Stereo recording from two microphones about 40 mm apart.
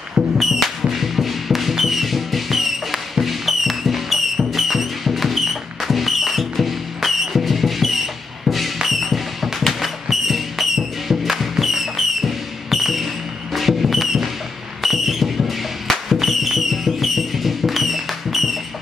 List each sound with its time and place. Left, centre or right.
0.4 s music: centre
14.8 s a sound: centre
16.1 s music: centre